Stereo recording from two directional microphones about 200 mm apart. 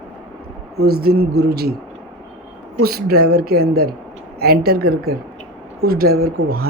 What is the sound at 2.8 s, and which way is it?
Speech, 50° right (ahead or behind).